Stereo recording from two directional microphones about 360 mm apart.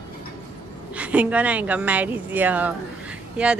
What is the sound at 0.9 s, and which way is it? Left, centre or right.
A woman's voice, centre.